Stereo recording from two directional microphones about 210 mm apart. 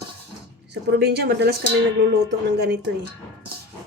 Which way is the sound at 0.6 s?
50° right (ahead or behind).